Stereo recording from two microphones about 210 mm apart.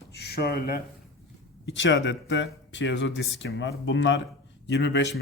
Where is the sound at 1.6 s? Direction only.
60° left (ahead or behind).